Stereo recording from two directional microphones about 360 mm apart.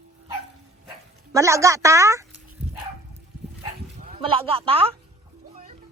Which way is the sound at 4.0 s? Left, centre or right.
Centre.